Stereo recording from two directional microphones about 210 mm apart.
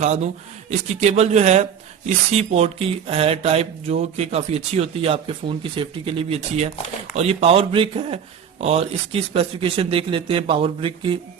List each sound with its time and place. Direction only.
0.0 s speech: 35° right (ahead or behind)